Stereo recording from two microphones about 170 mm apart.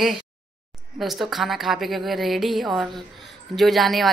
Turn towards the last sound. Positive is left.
turn(degrees=0)  # may be behind; listen again after turning